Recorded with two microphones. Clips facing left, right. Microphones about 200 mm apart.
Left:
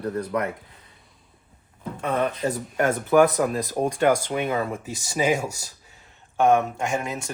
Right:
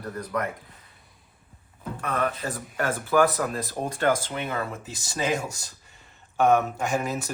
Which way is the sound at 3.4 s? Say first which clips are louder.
Left 6 dB; 10° left (ahead or behind).